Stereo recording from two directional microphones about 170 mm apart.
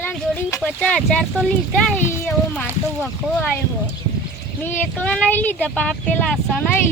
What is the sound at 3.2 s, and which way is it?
Speech, 5° right (ahead or behind).